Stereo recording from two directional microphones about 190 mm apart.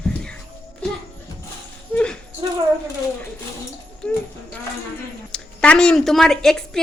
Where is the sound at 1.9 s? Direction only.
5° left (ahead or behind).